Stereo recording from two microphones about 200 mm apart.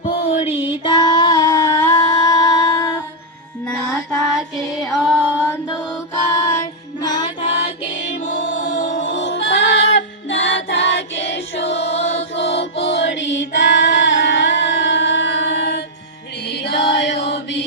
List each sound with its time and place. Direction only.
0.0 s a sound: 30° left (ahead or behind)
0.9 s female singing: 20° left (ahead or behind)
2.4 s music: 20° left (ahead or behind)
3.7 s music: centre (ahead or behind)
7.0 s music: 20° left (ahead or behind)
8.2 s music: 40° left (ahead or behind)
9.0 s music: 70° left (ahead or behind)
11.9 s choir: 60° left (ahead or behind)
16.5 s music: 60° left (ahead or behind)